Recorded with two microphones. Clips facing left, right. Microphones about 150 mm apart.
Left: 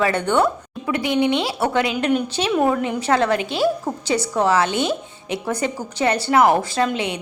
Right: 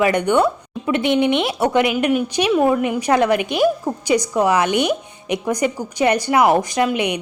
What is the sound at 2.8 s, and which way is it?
A woman's voice, 15° right (ahead or behind).